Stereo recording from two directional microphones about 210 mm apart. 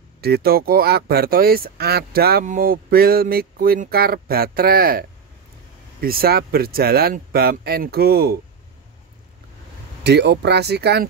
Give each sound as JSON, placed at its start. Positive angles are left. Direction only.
{"t": 0.2, "sound": "speech", "side_deg": -50}
{"t": 10.0, "sound": "speech", "side_deg": -55}